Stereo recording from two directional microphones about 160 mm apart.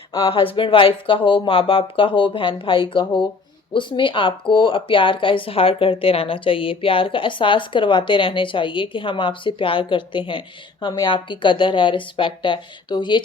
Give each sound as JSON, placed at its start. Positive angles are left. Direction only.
{"t": 0.3, "sound": "speech", "side_deg": 35}